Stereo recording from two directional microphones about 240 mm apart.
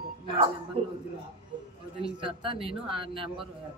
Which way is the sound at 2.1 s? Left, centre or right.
Right.